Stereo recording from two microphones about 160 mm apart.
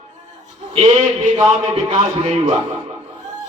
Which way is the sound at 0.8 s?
40° right (ahead or behind).